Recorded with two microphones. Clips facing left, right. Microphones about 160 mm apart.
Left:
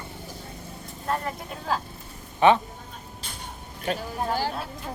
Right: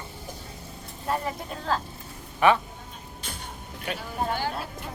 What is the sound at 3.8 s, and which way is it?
Speech, 35° left (ahead or behind).